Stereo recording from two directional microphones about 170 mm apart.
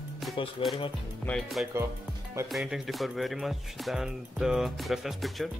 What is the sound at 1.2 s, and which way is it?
Speech, centre (ahead or behind).